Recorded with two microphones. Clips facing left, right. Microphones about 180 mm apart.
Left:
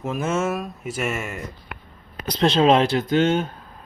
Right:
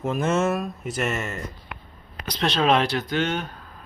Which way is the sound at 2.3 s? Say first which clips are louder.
Left 4 dB; 30° left (ahead or behind).